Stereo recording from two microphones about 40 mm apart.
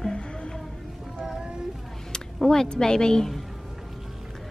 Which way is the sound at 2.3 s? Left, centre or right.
Centre.